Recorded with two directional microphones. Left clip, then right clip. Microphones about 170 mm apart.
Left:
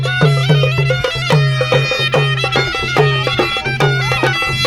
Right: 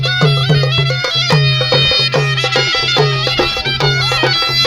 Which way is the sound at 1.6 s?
60° left (ahead or behind).